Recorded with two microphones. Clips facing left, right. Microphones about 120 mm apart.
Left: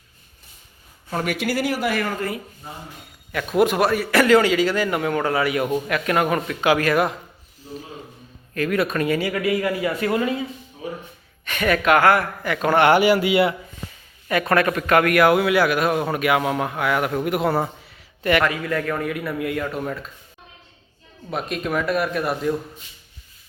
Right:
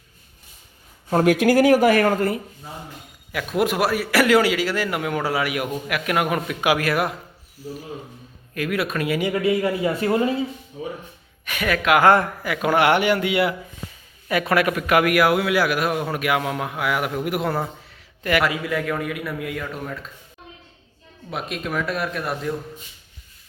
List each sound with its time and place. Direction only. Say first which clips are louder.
1.1 s speech: right 8 dB; 40° right (ahead or behind)
3.3 s a man's voice: left 3 dB; centre (ahead or behind)
8.5 s a man's voice: left 3 dB; 5° right (ahead or behind)
9.2 s speech: right 1 dB; 25° right (ahead or behind)
11.4 s a man's voice: left 2 dB; 5° right (ahead or behind)
11.9 s speech: right 4 dB; 20° right (ahead or behind)
12.4 s a man's voice: left 1 dB; 5° right (ahead or behind)
13.0 s a man's voice: left 3 dB; 5° left (ahead or behind)
21.2 s a man's voice: left 3 dB; centre (ahead or behind)